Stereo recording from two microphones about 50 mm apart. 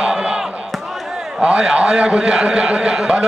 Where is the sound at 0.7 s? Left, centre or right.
Centre.